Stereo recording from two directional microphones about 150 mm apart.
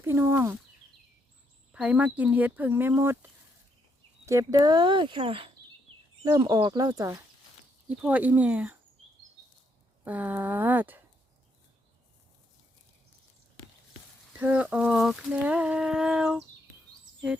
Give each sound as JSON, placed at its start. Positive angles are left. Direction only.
{"t": 0.0, "sound": "speech", "side_deg": -15}
{"t": 1.7, "sound": "speech", "side_deg": -10}
{"t": 4.3, "sound": "speech", "side_deg": -20}
{"t": 6.2, "sound": "speech", "side_deg": -25}
{"t": 7.9, "sound": "speech", "side_deg": -10}
{"t": 10.0, "sound": "speech", "side_deg": -10}
{"t": 14.3, "sound": "speech", "side_deg": -10}